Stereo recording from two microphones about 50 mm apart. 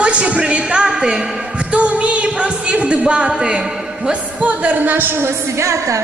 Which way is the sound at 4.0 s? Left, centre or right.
Right.